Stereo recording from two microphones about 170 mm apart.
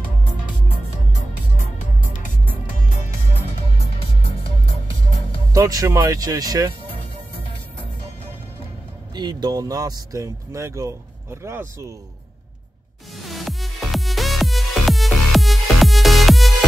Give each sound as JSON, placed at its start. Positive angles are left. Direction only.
{"t": 3.7, "sound": "music", "side_deg": 35}
{"t": 5.5, "sound": "speech", "side_deg": -20}
{"t": 9.1, "sound": "speech", "side_deg": -25}
{"t": 13.2, "sound": "music", "side_deg": 0}